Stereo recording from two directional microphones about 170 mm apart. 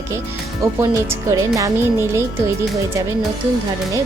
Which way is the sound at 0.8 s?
15° right (ahead or behind).